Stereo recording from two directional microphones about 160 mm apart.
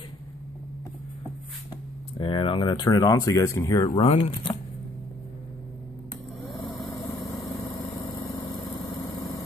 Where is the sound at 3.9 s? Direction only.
40° left (ahead or behind).